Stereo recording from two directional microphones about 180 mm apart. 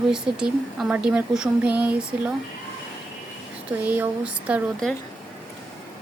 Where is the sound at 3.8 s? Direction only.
10° right (ahead or behind).